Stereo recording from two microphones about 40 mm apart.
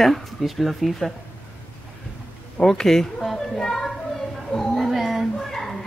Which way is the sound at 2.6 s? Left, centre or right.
Centre.